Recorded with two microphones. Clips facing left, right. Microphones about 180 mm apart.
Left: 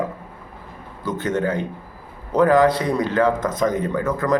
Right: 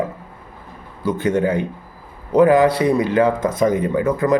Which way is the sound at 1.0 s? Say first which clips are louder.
Right 4 dB; 10° right (ahead or behind).